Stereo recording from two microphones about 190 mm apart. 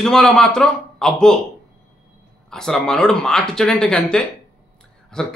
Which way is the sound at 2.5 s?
5° left (ahead or behind).